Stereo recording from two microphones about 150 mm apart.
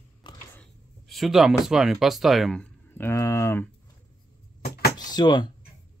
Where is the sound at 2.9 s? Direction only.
15° left (ahead or behind).